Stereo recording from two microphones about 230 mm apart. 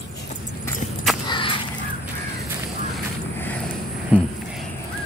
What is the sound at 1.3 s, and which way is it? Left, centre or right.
Crow, left.